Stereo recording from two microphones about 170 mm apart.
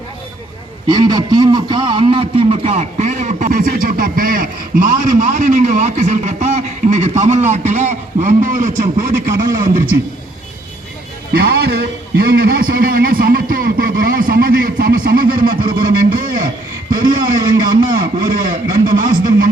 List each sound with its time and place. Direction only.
0.9 s a man's voice: 25° right (ahead or behind); by 10.0 s 55° right (ahead or behind)
11.3 s a man's voice: 65° right (ahead or behind)
17.0 s speech: 25° right (ahead or behind)
18.2 s a man's voice: 55° right (ahead or behind)